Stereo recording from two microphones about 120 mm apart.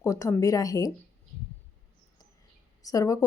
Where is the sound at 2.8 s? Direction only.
30° left (ahead or behind).